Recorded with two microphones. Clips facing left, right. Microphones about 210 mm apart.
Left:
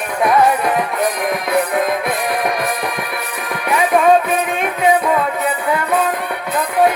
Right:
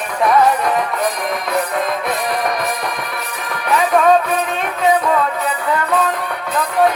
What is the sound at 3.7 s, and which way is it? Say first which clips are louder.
Music: even; 10° left (ahead or behind).